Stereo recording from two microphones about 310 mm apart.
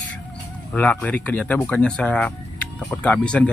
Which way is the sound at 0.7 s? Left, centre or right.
Centre.